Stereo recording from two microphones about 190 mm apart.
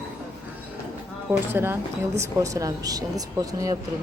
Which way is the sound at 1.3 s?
10° right (ahead or behind).